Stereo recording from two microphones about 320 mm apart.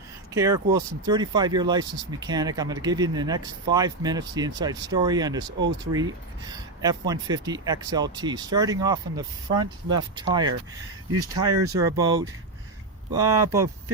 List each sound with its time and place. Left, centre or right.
0.3 s speech: centre
11.1 s speech: right
11.8 s speech: centre